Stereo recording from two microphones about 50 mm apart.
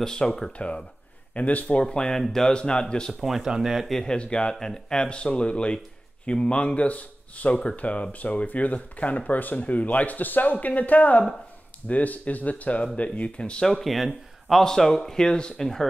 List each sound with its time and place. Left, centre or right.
0.0 s speech: centre
0.5 s speech: left; by 2.5 s centre
2.5 s speech: centre
3.1 s speech: centre
3.9 s speech: centre
13.7 s speech: centre